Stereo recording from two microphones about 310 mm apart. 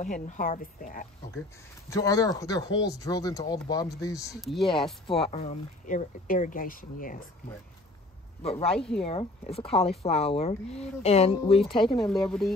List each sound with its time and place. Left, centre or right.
0.0 s speech: left
1.9 s speech: centre
4.4 s speech: centre
5.0 s speech: centre
8.4 s speech: centre
8.7 s speech: centre
9.0 s speech: centre
12.1 s speech: centre